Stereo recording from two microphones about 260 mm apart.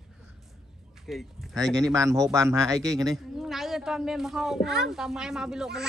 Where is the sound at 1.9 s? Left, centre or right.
Centre.